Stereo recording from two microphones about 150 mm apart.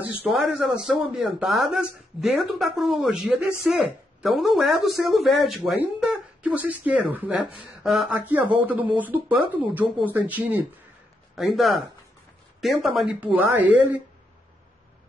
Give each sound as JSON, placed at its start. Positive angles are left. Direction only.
{"t": 0.0, "sound": "a woman's voice", "side_deg": -5}